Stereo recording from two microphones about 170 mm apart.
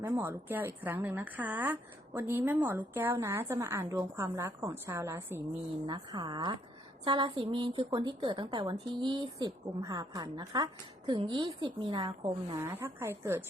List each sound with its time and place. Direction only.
0.0 s a woman's voice: 15° right (ahead or behind); by 12.5 s 30° right (ahead or behind)
12.5 s a woman's voice: 15° right (ahead or behind)